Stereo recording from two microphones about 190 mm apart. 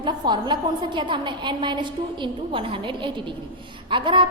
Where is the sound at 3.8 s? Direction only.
25° right (ahead or behind).